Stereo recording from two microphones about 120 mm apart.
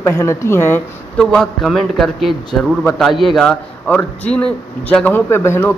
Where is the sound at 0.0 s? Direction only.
25° left (ahead or behind).